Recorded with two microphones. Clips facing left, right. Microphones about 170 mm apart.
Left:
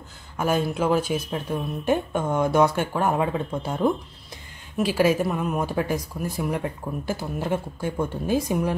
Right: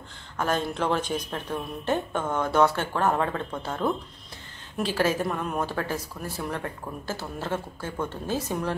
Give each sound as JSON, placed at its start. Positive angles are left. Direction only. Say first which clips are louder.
{"t": 0.4, "sound": "a woman's voice", "louder": "left 3 dB", "side_deg": 10}